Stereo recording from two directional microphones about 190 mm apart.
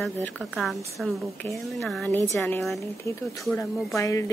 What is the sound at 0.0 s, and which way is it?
A woman's voice, centre (ahead or behind).